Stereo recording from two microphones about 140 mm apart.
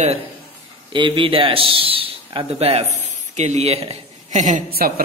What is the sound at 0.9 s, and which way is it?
A man's voice, 35° right (ahead or behind).